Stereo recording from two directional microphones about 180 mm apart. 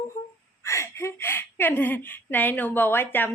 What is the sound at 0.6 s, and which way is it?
A woman's voice, 15° left (ahead or behind).